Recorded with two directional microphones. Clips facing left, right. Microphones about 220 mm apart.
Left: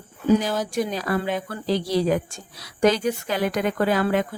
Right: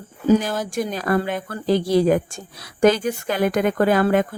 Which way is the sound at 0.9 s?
50° right (ahead or behind).